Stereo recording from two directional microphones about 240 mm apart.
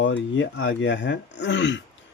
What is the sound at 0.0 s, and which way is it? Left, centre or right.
Speech, left.